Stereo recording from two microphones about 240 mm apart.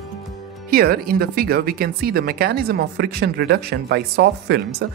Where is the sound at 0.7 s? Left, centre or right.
Right.